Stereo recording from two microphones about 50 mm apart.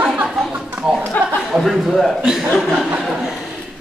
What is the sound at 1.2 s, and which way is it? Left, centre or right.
Speech, left.